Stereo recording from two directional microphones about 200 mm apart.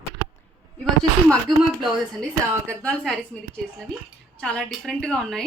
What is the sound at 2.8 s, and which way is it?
A woman's voice, 5° left (ahead or behind).